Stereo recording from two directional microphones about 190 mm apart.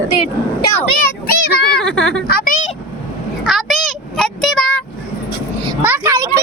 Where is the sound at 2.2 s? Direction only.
50° left (ahead or behind).